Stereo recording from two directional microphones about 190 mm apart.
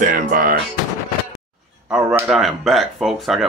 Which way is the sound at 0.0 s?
45° right (ahead or behind).